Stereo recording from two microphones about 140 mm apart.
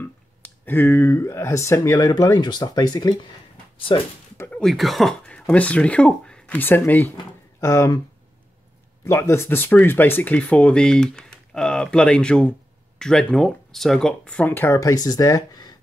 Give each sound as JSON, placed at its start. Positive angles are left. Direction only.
{"t": 0.0, "sound": "speech", "side_deg": 15}
{"t": 4.4, "sound": "speech", "side_deg": 5}
{"t": 9.0, "sound": "speech", "side_deg": 20}